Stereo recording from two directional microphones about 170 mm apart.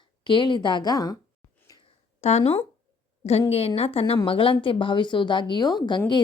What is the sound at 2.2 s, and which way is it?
A woman's voice, 40° left (ahead or behind).